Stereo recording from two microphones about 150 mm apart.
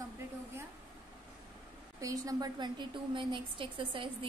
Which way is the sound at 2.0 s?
20° right (ahead or behind).